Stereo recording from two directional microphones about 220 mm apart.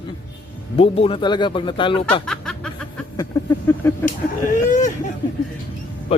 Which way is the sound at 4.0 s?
35° left (ahead or behind).